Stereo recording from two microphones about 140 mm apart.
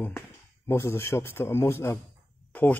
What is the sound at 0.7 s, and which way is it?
Speech, 20° left (ahead or behind).